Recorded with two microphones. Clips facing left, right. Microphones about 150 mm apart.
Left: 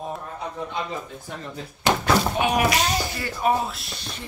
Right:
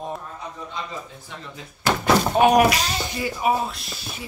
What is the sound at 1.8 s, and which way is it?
Thunk, 20° left (ahead or behind).